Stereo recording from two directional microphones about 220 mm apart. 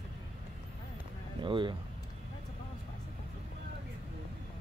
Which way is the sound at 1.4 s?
20° right (ahead or behind).